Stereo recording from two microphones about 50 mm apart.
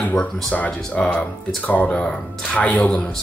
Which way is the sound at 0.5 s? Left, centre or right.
Left.